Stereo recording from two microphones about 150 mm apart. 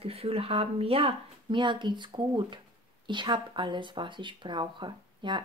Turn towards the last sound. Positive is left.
turn(degrees=-30)  # may be behind; listen again after turning